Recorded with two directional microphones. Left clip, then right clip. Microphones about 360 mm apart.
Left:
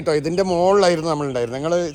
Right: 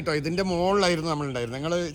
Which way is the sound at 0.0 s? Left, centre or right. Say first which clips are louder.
Left 8 dB; centre.